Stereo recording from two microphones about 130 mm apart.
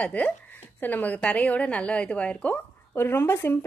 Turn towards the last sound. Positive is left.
turn(degrees=20)  # may be behind; listen again after turning